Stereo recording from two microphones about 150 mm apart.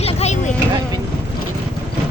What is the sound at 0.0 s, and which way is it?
Vehicle, 45° left (ahead or behind).